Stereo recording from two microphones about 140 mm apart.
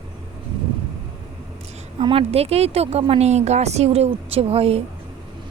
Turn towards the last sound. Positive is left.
turn(degrees=-45)  # may be behind; listen again after turning